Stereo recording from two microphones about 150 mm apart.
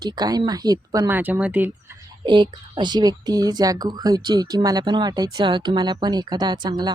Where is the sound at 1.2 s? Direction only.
10° right (ahead or behind).